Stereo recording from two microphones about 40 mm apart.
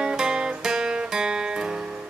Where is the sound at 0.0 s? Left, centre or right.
Centre.